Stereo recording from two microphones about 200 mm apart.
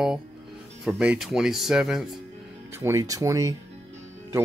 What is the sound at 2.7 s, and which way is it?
Speech, 15° right (ahead or behind).